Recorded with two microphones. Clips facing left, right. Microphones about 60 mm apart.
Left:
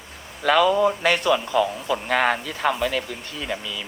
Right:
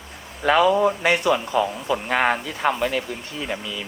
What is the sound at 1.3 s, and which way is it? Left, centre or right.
Speech, right.